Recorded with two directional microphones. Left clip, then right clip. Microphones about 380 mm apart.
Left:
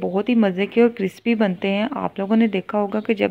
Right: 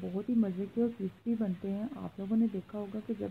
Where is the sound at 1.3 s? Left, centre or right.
Left.